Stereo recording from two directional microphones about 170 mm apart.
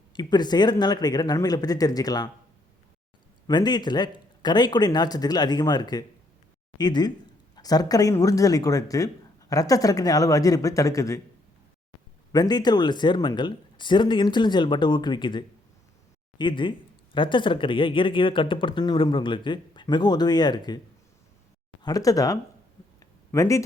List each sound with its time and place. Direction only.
0.1 s speech: 25° left (ahead or behind)
3.4 s speech: 25° left (ahead or behind)
12.3 s speech: 25° left (ahead or behind)
21.8 s speech: 20° left (ahead or behind)
23.0 s a sound: 20° left (ahead or behind)